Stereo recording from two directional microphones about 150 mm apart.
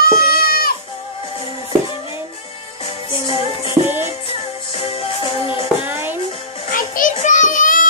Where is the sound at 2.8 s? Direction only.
40° left (ahead or behind).